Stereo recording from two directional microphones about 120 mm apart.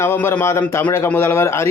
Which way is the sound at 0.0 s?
20° left (ahead or behind).